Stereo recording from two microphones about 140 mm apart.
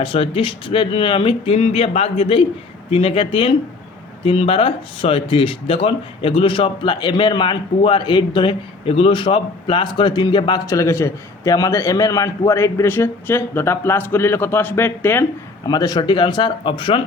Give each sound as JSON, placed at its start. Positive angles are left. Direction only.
{"t": 0.0, "sound": "a man's voice", "side_deg": 40}
{"t": 15.6, "sound": "speech", "side_deg": 30}